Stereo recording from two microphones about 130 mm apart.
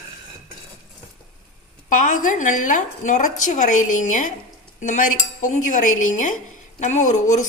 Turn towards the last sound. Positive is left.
turn(degrees=65)  # may be behind; listen again after turning